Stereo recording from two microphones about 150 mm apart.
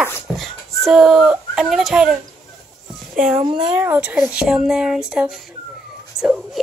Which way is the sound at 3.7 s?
10° right (ahead or behind).